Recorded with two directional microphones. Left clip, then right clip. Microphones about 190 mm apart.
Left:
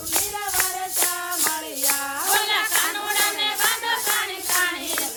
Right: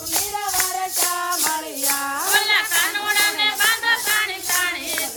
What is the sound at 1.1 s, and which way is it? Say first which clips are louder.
Music: right 4 dB; 35° right (ahead or behind).